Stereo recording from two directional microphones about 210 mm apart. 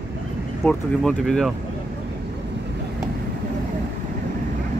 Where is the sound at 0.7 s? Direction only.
5° left (ahead or behind).